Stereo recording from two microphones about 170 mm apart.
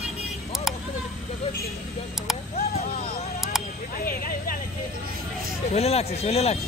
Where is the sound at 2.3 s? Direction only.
Centre (ahead or behind).